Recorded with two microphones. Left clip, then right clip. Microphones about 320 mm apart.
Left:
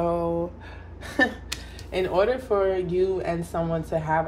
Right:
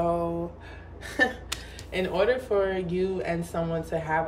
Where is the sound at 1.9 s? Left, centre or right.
Centre.